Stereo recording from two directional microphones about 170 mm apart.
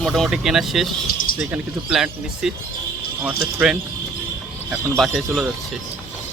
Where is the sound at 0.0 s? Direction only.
Centre (ahead or behind).